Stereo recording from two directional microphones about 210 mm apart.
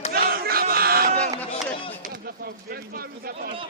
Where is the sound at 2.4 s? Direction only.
45° right (ahead or behind).